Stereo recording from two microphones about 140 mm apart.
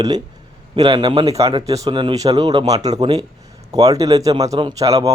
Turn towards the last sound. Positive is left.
turn(degrees=-25)  # may be behind; listen again after turning